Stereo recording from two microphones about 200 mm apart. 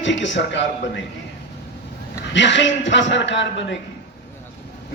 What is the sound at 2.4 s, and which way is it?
A man's voice, 65° left (ahead or behind).